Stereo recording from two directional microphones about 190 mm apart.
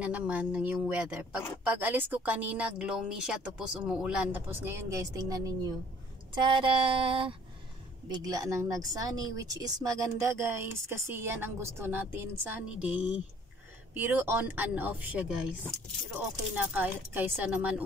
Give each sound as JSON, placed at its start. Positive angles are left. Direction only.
{"t": 0.0, "sound": "speech", "side_deg": -5}
{"t": 6.3, "sound": "a sound", "side_deg": -25}
{"t": 8.1, "sound": "speech", "side_deg": -20}
{"t": 16.5, "sound": "speech", "side_deg": -10}